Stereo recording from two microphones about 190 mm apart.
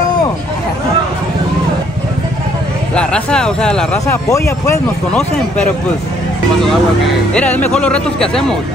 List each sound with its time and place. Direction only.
2.9 s speech: 5° left (ahead or behind)
4.3 s speech: 15° left (ahead or behind)
7.3 s speech: 10° left (ahead or behind)